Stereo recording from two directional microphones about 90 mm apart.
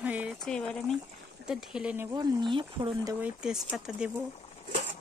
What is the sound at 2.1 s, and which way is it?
Speech, 55° right (ahead or behind).